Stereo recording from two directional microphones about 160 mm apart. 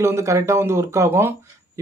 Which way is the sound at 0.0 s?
15° right (ahead or behind).